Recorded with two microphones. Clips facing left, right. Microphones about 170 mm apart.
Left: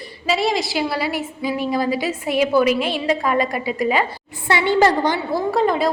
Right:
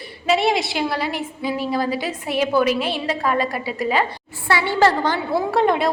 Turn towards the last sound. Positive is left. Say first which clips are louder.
# even
turn(degrees=0)  # may be behind; listen again after turning